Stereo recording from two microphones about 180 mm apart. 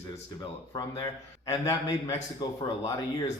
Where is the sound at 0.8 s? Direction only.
15° left (ahead or behind).